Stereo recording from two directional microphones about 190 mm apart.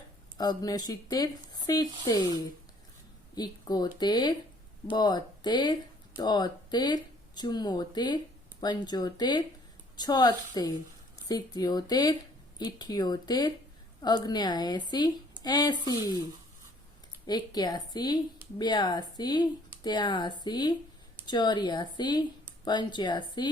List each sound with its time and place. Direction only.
0.3 s speech: 20° left (ahead or behind)
3.3 s speech: 20° left (ahead or behind)
17.2 s speech: 20° left (ahead or behind)